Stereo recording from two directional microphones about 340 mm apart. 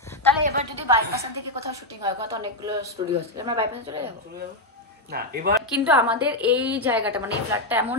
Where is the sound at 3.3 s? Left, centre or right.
Centre.